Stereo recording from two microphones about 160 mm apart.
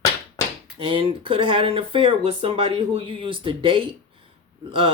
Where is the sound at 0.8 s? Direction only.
35° right (ahead or behind).